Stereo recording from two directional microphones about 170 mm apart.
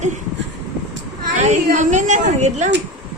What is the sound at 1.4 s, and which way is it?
A woman's voice, 45° right (ahead or behind).